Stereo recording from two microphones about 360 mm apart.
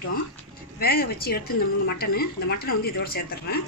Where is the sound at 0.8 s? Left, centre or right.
Left.